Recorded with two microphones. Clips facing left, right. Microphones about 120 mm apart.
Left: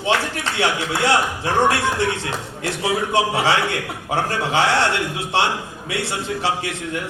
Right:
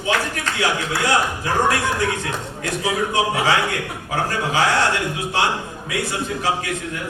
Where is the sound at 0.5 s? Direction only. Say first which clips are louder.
Left 1 dB; 25° left (ahead or behind).